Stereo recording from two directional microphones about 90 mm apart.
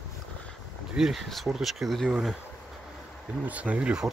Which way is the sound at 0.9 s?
5° right (ahead or behind).